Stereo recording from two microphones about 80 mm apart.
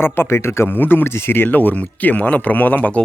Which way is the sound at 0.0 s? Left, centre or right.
Left.